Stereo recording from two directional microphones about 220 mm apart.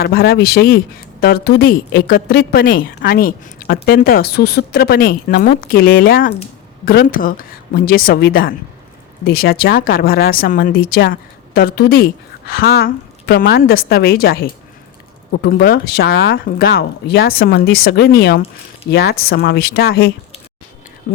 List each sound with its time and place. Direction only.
0.0 s a woman's voice: 45° left (ahead or behind)